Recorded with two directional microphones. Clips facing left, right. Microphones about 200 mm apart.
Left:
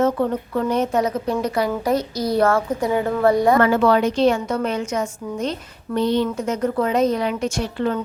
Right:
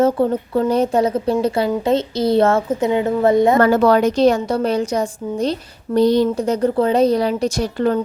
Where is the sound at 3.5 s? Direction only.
40° right (ahead or behind).